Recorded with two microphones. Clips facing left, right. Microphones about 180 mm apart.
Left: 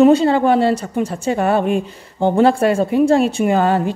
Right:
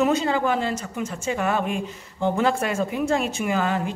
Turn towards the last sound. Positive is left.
turn(degrees=35)  # may be behind; listen again after turning